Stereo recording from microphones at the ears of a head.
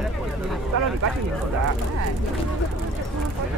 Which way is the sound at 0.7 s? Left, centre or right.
Right.